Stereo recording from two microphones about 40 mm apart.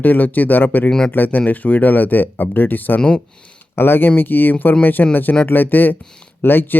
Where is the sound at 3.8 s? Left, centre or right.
Left.